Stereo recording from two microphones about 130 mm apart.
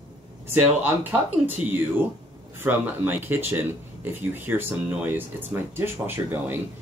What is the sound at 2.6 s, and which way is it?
Speech, 15° right (ahead or behind).